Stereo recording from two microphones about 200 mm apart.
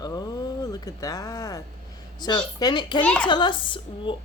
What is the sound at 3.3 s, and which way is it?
Speech, 25° left (ahead or behind).